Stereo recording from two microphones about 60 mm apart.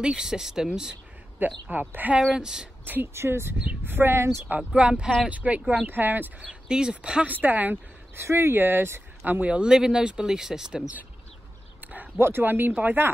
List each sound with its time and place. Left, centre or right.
0.0 s speech: centre
1.4 s speech: right
2.3 s speech: centre
2.8 s speech: right
4.6 s speech: centre
6.7 s speech: centre
7.4 s speech: right
8.2 s speech: right
9.2 s speech: right
9.7 s speech: centre
11.8 s a sound: right
12.2 s speech: right